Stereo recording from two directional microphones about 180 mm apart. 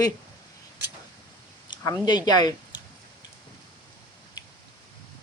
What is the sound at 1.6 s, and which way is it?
Speech, 25° left (ahead or behind).